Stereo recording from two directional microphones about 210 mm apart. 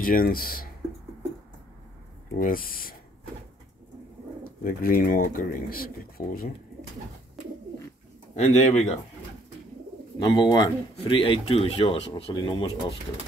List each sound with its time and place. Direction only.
0.0 s speech: 45° left (ahead or behind)
2.3 s speech: 40° left (ahead or behind)
4.5 s speech: 45° left (ahead or behind)
8.4 s speech: 35° left (ahead or behind)
10.1 s speech: 20° left (ahead or behind)